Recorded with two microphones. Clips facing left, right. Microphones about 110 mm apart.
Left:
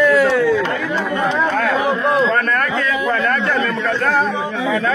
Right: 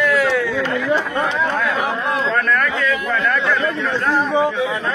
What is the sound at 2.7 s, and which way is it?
Speech, 35° left (ahead or behind).